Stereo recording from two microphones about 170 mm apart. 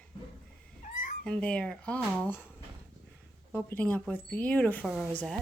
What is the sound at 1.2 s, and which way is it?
Speech, 5° left (ahead or behind).